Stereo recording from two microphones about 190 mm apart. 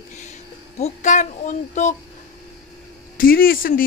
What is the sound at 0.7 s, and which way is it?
A woman's voice, 35° left (ahead or behind).